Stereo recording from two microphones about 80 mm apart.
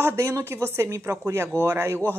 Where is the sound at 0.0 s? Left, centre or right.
Right.